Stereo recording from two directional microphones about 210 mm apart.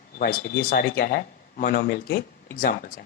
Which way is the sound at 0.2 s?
45° left (ahead or behind).